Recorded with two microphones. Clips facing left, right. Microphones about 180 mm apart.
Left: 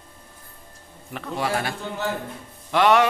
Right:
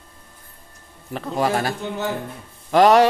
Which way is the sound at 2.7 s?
40° right (ahead or behind).